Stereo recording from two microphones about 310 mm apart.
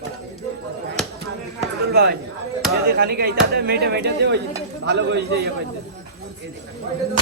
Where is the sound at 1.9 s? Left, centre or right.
Right.